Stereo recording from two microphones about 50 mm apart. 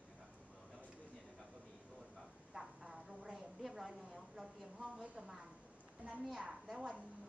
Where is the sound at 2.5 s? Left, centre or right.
Centre.